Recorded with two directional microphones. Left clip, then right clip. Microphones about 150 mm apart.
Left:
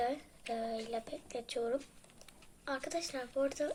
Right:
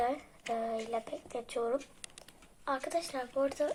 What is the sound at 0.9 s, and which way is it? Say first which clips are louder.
Speech: right 3 dB; 15° left (ahead or behind).